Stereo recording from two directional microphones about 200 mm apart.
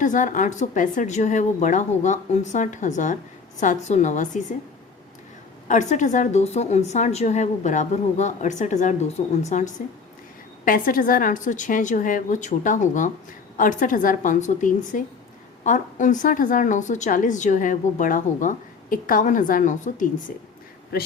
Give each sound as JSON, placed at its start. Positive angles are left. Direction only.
{"t": 0.0, "sound": "a woman's voice", "side_deg": 40}
{"t": 5.6, "sound": "a woman's voice", "side_deg": 40}
{"t": 20.9, "sound": "speech", "side_deg": 50}